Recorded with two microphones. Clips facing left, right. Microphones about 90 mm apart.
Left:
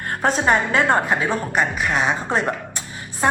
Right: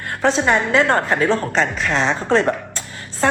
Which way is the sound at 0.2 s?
45° left (ahead or behind).